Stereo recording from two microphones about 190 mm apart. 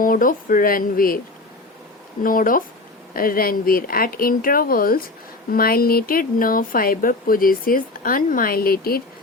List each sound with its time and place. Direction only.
0.0 s speech: 45° left (ahead or behind)
2.2 s speech: 45° left (ahead or behind)